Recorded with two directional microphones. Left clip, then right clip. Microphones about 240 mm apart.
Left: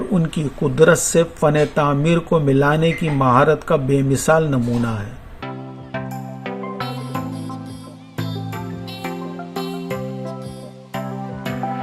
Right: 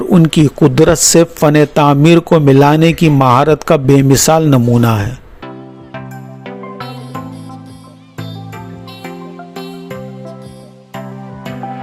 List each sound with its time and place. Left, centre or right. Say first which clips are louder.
0.1 s speech: right 12 dB; right
6.4 s music: right 1 dB; centre
9.6 s music: left 1 dB; centre